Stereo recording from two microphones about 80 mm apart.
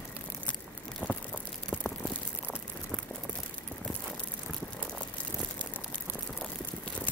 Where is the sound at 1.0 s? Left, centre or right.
Centre.